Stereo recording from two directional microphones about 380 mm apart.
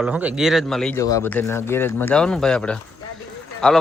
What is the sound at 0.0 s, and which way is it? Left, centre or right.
Speech, centre.